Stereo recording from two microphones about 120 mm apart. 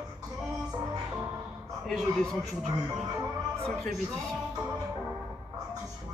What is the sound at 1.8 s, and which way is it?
Speech, 5° left (ahead or behind).